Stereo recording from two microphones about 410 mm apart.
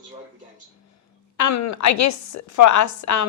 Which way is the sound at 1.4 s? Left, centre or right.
Left.